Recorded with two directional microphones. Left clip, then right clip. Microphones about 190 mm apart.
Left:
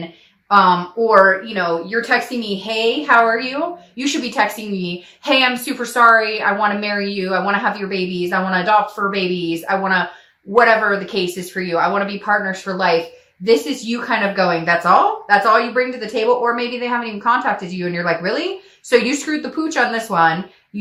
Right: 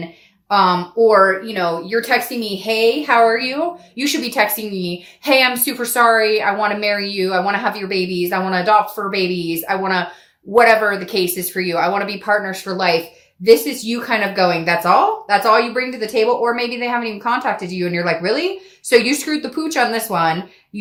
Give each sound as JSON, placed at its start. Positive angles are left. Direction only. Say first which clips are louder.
{"t": 0.5, "sound": "speech", "louder": "left 2 dB", "side_deg": -45}